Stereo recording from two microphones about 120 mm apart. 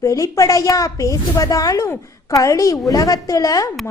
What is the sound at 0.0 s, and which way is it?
Speech, 25° left (ahead or behind).